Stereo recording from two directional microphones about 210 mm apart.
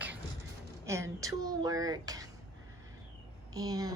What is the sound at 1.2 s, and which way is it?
Speech, 15° right (ahead or behind).